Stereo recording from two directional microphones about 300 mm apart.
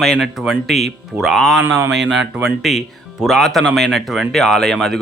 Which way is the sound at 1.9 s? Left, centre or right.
Right.